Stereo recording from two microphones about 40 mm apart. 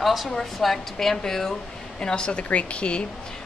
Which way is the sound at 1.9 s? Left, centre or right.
Left.